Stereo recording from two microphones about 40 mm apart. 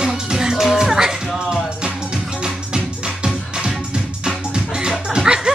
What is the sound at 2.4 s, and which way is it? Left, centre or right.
Music, centre.